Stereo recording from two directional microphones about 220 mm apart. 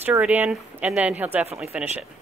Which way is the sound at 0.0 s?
10° right (ahead or behind).